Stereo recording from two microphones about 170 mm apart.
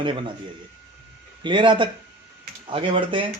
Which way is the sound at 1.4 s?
30° right (ahead or behind).